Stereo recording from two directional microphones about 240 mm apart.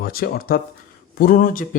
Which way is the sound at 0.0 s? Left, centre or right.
Left.